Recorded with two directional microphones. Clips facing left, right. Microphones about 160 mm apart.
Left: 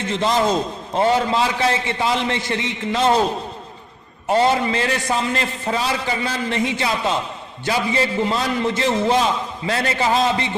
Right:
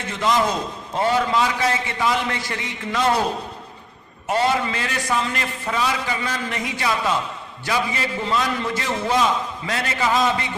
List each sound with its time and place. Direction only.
0.1 s a man's voice: 25° left (ahead or behind)
4.3 s a man's voice: 30° left (ahead or behind)